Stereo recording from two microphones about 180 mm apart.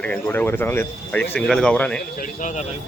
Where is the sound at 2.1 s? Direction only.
50° left (ahead or behind).